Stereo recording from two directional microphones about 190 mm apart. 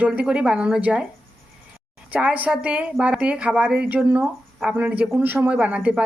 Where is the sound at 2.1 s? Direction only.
5° right (ahead or behind).